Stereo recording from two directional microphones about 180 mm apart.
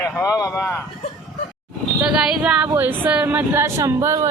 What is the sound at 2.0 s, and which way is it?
Speech, 5° right (ahead or behind).